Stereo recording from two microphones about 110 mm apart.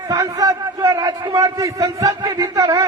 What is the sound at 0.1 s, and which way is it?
A man's voice, 35° right (ahead or behind).